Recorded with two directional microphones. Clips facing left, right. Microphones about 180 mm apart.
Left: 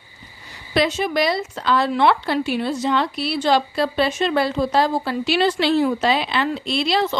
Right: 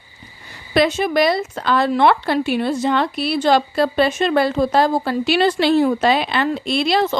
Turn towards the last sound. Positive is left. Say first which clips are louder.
# right 3 dB
turn(degrees=-45)  # may be behind; listen again after turning